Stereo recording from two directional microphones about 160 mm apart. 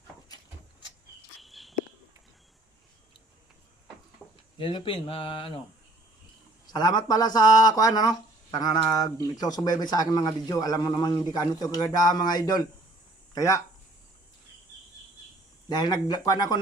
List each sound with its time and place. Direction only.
1.4 s a sound: centre (ahead or behind)
4.5 s speech: 30° left (ahead or behind)
6.7 s speech: 25° left (ahead or behind)
15.7 s speech: 25° left (ahead or behind)